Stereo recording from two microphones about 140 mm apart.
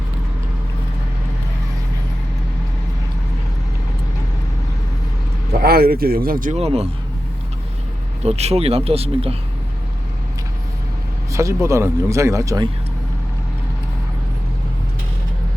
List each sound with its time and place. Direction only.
5.6 s speech: 90° right
6.5 s speech: 45° right (ahead or behind)
8.2 s speech: 50° right (ahead or behind)
11.3 s speech: 20° right (ahead or behind)